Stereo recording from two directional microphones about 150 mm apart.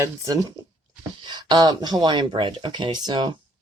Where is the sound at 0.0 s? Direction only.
25° right (ahead or behind).